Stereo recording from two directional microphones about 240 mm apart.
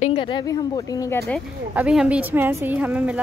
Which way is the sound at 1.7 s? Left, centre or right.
Centre.